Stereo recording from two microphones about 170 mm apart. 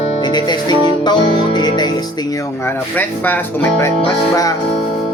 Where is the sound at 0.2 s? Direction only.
25° left (ahead or behind).